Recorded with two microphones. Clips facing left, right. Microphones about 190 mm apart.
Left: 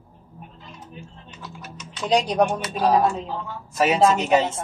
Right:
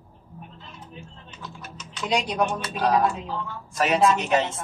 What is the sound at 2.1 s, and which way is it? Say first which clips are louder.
Speech: left 5 dB; 35° left (ahead or behind).